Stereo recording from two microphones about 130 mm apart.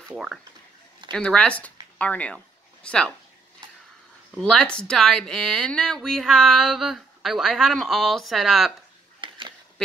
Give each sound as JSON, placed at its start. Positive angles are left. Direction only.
{"t": 0.1, "sound": "speech", "side_deg": -5}
{"t": 4.4, "sound": "speech", "side_deg": 5}
{"t": 9.2, "sound": "a sound", "side_deg": -40}